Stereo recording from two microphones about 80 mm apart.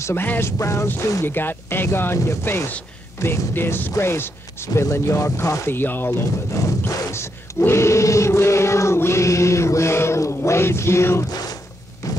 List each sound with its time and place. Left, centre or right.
0.0 s speech: left
1.2 s speech: left
5.7 s speech: left
12.0 s a sound: left